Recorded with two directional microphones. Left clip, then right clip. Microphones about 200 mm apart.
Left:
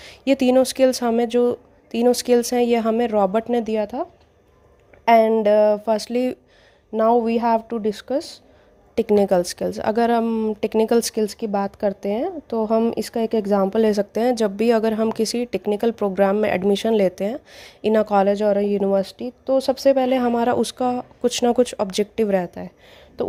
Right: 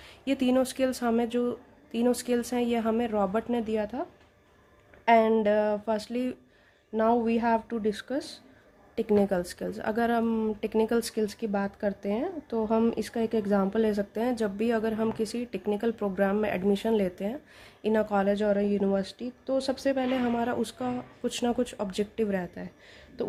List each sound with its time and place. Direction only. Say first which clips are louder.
0.0 s speech: left 10 dB; 35° left (ahead or behind)
5.0 s speech: left 7 dB; 35° left (ahead or behind)